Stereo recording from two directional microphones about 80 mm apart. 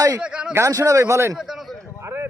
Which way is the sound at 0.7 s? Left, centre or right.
Right.